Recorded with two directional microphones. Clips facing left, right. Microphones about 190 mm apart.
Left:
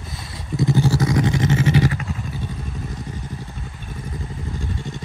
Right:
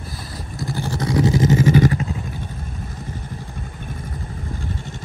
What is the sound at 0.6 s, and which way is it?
Vehicle, 20° left (ahead or behind).